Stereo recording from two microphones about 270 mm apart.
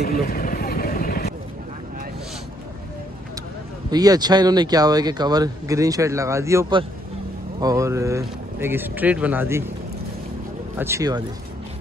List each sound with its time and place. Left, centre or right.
0.0 s vehicle: left
3.9 s speech: centre
10.8 s speech: centre